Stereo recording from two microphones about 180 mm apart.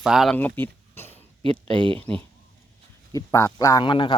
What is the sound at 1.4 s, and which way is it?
Speech, 30° right (ahead or behind).